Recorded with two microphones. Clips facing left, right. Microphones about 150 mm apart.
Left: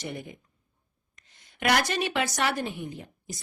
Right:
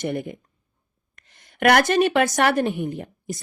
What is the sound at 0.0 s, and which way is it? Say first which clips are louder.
Speech: right 10 dB; 55° right (ahead or behind).